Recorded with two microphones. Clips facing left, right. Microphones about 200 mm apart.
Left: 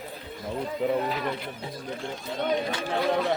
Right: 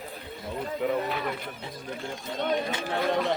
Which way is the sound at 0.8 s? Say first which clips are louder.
Left 2 dB; 30° left (ahead or behind).